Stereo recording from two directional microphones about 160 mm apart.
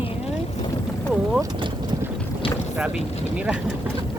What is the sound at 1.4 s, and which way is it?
Boat, 30° right (ahead or behind).